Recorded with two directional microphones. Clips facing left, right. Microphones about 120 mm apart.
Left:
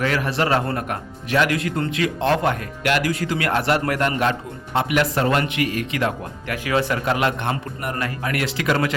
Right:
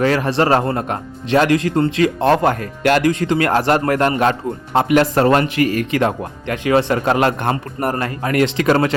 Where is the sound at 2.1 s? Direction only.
45° right (ahead or behind).